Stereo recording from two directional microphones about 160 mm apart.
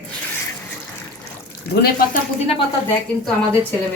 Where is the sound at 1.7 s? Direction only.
80° left.